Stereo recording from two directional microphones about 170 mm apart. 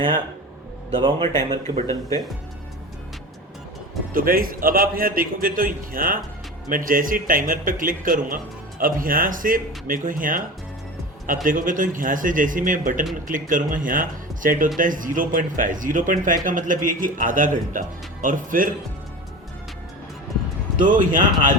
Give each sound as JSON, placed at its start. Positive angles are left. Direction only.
{"t": 0.9, "sound": "a man's voice", "side_deg": -25}
{"t": 1.4, "sound": "speech", "side_deg": -45}
{"t": 4.1, "sound": "a man's voice", "side_deg": -55}
{"t": 11.4, "sound": "speech", "side_deg": -50}
{"t": 20.7, "sound": "speech", "side_deg": -50}